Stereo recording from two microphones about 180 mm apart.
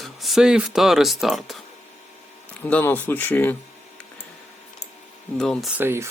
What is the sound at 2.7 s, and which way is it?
Speech, 10° left (ahead or behind).